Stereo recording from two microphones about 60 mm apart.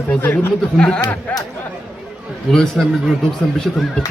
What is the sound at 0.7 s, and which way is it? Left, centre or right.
Speech, centre.